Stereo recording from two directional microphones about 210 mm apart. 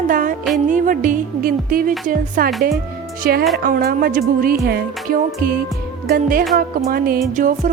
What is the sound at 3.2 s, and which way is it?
Music, 45° right (ahead or behind).